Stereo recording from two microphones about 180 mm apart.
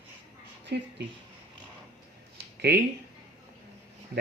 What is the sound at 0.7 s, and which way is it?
Speech, 70° right (ahead or behind).